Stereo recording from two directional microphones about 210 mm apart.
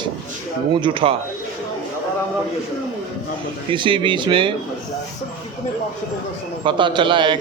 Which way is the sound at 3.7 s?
25° right (ahead or behind).